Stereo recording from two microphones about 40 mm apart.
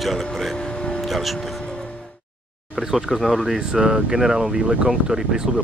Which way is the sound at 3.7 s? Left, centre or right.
Centre.